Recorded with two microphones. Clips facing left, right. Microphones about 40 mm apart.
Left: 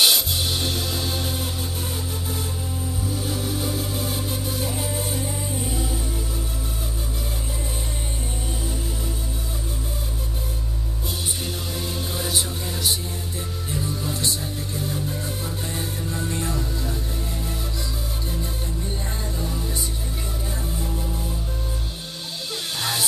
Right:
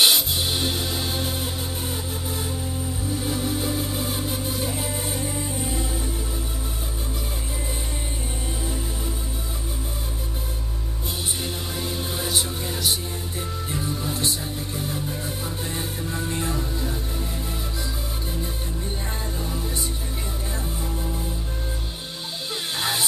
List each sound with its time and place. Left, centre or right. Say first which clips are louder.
0.0 s music: even; centre
3.2 s music: right 2 dB; centre
11.7 s music: even; centre
13.7 s music: left 1 dB; centre
19.4 s music: left 1 dB; centre
22.8 s music: right 1 dB; centre